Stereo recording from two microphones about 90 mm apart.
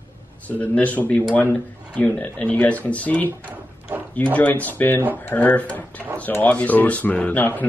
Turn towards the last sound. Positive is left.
turn(degrees=20)  # may be behind; listen again after turning